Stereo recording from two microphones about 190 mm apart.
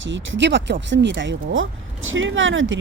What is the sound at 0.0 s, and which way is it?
Speech, 80° right.